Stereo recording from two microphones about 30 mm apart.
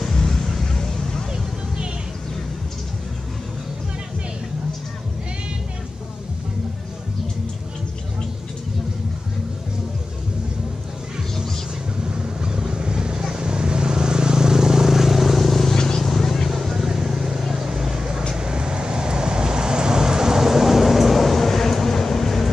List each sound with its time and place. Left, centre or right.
0.0 s vehicle: centre
12.0 s vehicle: right; by 15.7 s centre
15.7 s vehicle: centre
16.0 s vehicle: centre
16.4 s vehicle: centre
17.6 s vehicle: centre